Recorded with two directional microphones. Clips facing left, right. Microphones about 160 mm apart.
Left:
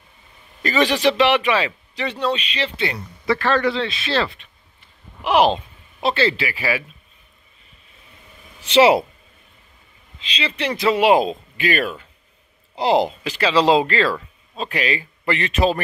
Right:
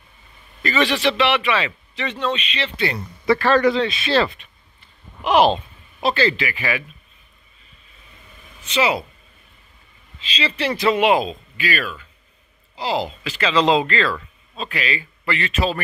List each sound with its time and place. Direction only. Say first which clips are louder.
0.6 s a man's voice: left 1 dB; 40° left (ahead or behind)
3.3 s speech: right 3 dB; 10° right (ahead or behind)
4.7 s a sound: right 1 dB; 10° left (ahead or behind); by 6.8 s 30° left (ahead or behind)
8.6 s speech: left 7 dB; 65° left (ahead or behind)
10.2 s speech: right 1 dB; 20° left (ahead or behind)
11.2 s speech: left 4 dB; 50° left (ahead or behind)
13.4 s speech: left 2 dB; 35° left (ahead or behind)
14.0 s a sound: left 2 dB; 15° left (ahead or behind)
14.7 s speech: left 3 dB; 40° left (ahead or behind)